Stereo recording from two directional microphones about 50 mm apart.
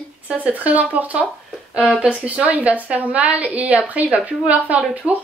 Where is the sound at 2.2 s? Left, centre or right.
Right.